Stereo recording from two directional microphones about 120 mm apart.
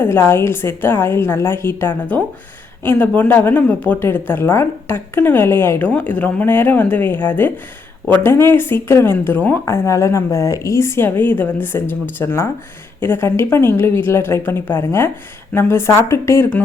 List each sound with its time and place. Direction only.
0.0 s a woman's voice: 20° left (ahead or behind)